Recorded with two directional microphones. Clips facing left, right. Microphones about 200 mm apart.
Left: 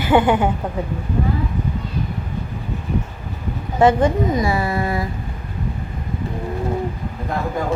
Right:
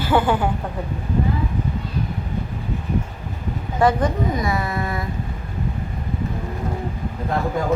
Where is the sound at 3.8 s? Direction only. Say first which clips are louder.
Left 4 dB; 30° left (ahead or behind).